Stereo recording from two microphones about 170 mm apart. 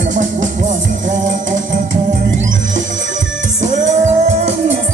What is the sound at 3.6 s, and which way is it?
Music, 45° right (ahead or behind).